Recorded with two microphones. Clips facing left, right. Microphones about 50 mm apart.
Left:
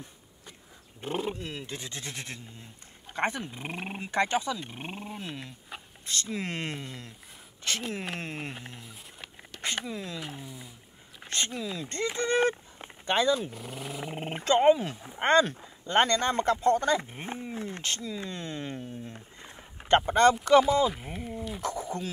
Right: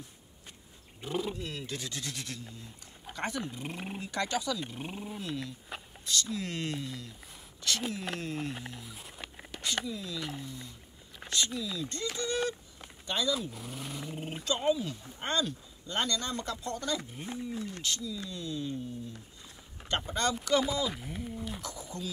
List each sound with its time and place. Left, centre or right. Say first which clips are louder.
1.0 s speech: left 2 dB; left
5.7 s a sound: left 2 dB; centre
6.0 s speech: left 1 dB; left
8.8 s a sound: right 1 dB; centre
9.8 s speech: left 1 dB; left
10.2 s speech: right 1 dB; centre
11.2 s speech: left 1 dB; left
12.2 s a sound: left 7 dB; left
13.5 s speech: left 3 dB; centre
14.1 s speech: left 10 dB; left